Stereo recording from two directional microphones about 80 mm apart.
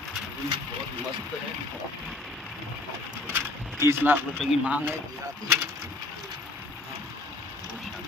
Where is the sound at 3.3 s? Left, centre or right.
Right.